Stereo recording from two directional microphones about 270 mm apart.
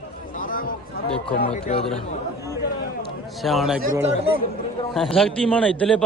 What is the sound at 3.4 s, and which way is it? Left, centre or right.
Speech, centre.